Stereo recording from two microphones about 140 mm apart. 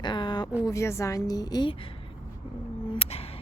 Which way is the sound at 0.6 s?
20° left (ahead or behind).